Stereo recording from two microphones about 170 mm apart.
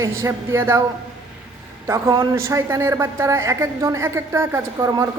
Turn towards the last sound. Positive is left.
turn(degrees=-20)  # may be behind; listen again after turning